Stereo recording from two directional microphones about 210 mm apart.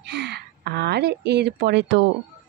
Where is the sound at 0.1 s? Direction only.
55° right (ahead or behind).